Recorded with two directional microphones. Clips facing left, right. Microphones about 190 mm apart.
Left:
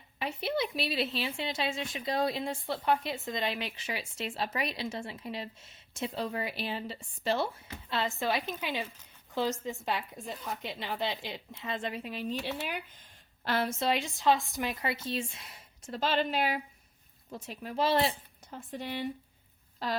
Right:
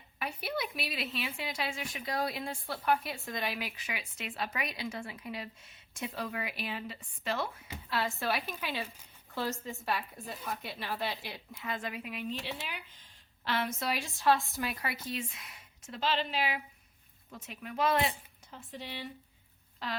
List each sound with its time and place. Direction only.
0.2 s a woman's voice: 25° left (ahead or behind); by 13.7 s 40° left (ahead or behind)
13.7 s a woman's voice: 25° left (ahead or behind)
16.0 s speech: 45° left (ahead or behind)
17.3 s a woman's voice: 35° left (ahead or behind)
18.7 s speech: 50° left (ahead or behind)
19.8 s a woman's voice: 40° left (ahead or behind)